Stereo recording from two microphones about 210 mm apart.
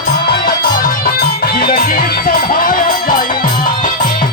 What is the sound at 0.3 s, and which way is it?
Music, 45° left (ahead or behind).